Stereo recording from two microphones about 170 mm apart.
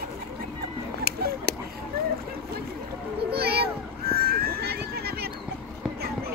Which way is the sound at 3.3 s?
70° right (ahead or behind).